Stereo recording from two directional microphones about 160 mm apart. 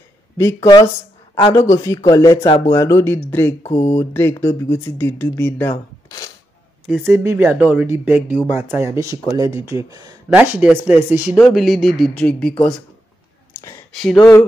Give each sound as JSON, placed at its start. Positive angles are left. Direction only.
{"t": 0.4, "sound": "speech", "side_deg": 20}
{"t": 6.9, "sound": "speech", "side_deg": -15}
{"t": 10.3, "sound": "speech", "side_deg": -10}
{"t": 13.9, "sound": "speech", "side_deg": 5}